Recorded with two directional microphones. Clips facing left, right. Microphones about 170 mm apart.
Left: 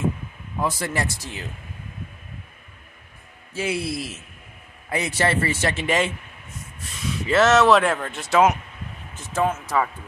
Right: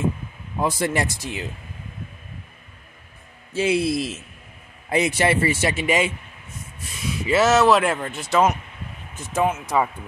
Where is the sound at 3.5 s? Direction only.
20° right (ahead or behind).